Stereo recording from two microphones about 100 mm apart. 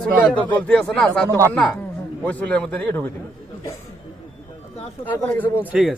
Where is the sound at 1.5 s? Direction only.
10° left (ahead or behind).